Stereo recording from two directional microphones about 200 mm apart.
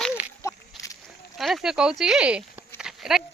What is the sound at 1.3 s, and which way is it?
Speech, centre (ahead or behind).